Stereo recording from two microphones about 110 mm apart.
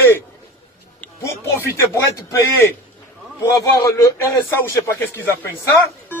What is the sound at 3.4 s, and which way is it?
Speech, 30° left (ahead or behind).